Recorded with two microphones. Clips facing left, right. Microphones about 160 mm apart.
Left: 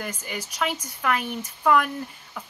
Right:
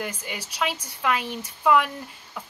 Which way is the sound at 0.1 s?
10° right (ahead or behind).